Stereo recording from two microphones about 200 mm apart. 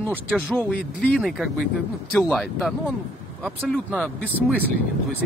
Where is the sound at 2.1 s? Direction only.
5° left (ahead or behind).